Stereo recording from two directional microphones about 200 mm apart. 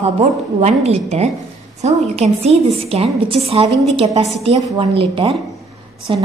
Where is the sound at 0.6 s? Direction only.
30° right (ahead or behind).